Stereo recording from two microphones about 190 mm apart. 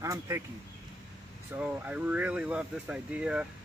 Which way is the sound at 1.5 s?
10° right (ahead or behind).